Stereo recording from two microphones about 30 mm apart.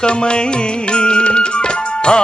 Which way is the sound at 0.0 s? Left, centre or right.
Left.